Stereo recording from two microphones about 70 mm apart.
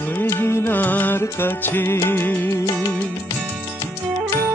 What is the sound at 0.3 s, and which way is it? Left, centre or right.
Music, left.